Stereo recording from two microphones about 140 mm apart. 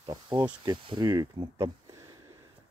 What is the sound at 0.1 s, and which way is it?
Speech, 25° right (ahead or behind).